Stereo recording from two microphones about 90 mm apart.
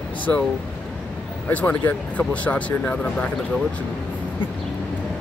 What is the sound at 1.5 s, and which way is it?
Speech, 15° left (ahead or behind).